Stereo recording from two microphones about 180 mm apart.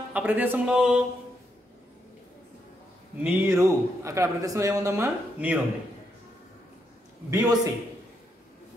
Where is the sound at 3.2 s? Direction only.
10° right (ahead or behind).